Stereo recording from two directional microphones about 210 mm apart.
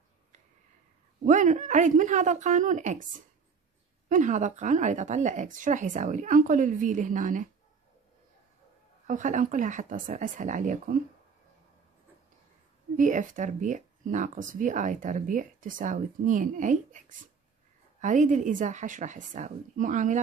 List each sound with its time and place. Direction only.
1.2 s speech: 35° right (ahead or behind)
4.1 s speech: 35° right (ahead or behind)
9.0 s speech: 35° right (ahead or behind)
12.9 s speech: 35° right (ahead or behind)
18.0 s speech: 35° right (ahead or behind)